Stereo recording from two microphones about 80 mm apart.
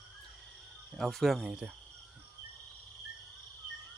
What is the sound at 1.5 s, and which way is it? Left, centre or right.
Speech, centre.